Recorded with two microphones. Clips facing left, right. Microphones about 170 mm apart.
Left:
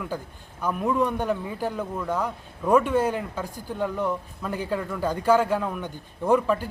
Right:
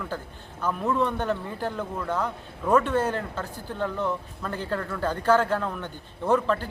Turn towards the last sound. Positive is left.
turn(degrees=10)  # may be behind; listen again after turning